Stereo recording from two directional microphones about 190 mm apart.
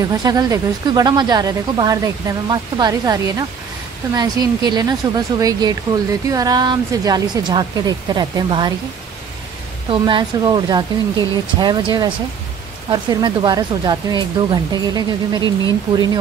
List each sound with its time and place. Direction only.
0.2 s speech: 20° right (ahead or behind)
9.8 s speech: 25° right (ahead or behind)